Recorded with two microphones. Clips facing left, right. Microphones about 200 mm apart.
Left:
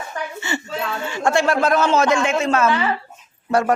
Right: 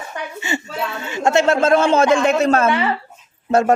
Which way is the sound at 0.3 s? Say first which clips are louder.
Right 3 dB; 15° right (ahead or behind).